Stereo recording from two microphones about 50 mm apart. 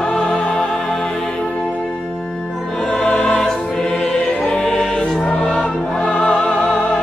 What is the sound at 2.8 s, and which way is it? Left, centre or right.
Music, centre.